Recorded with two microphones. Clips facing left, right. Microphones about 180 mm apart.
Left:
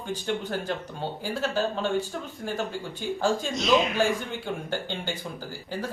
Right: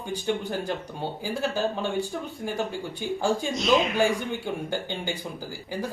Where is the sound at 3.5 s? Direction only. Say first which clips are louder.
Even; centre (ahead or behind).